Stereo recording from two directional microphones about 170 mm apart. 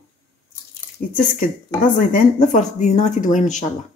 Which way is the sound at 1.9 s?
50° left (ahead or behind).